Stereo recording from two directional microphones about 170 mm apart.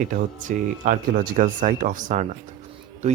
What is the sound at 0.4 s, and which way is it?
Speech, 55° right (ahead or behind).